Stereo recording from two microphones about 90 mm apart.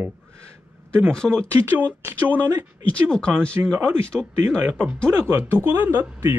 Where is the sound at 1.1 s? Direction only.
10° left (ahead or behind).